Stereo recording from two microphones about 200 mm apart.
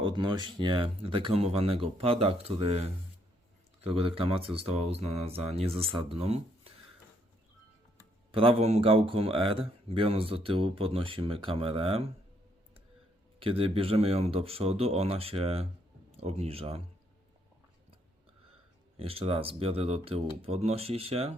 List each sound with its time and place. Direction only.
0.0 s speech: 25° right (ahead or behind)
8.3 s speech: 25° right (ahead or behind)
13.4 s speech: 30° right (ahead or behind)
18.9 s speech: 30° right (ahead or behind)